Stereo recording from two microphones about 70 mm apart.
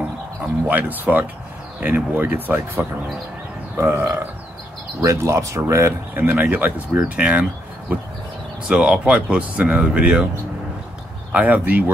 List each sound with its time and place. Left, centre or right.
0.7 s speech: right
3.7 s speech: right
6.2 s speech: right
8.6 s speech: centre
11.3 s speech: right